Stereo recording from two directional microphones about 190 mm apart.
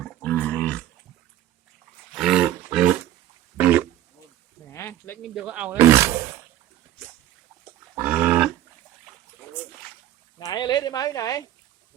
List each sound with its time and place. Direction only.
0.0 s dog: 5° left (ahead or behind)
2.1 s roar: centre (ahead or behind)
3.6 s grunt: 10° right (ahead or behind)
4.7 s a sound: 10° left (ahead or behind)
5.3 s speech: 5° right (ahead or behind)
7.9 s livestock: 10° right (ahead or behind)
10.3 s a sound: 20° left (ahead or behind)